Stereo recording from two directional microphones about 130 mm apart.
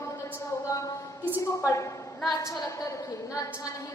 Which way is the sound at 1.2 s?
20° left (ahead or behind).